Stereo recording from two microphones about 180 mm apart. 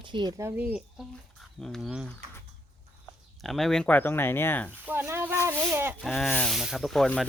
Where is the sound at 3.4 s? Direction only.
Centre (ahead or behind).